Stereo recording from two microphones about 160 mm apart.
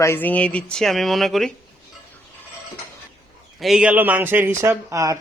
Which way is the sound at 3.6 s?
Centre (ahead or behind).